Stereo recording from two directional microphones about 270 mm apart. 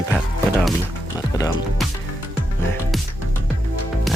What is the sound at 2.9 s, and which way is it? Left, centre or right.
Music, centre.